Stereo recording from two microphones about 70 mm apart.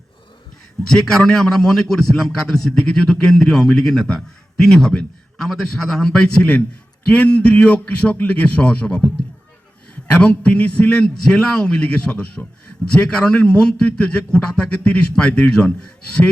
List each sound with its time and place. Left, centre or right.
0.9 s a man's voice: centre